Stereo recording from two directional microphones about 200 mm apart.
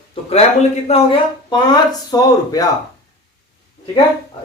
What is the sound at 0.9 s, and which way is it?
Speech, 25° left (ahead or behind).